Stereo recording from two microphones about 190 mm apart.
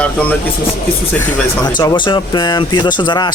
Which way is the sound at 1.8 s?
20° left (ahead or behind).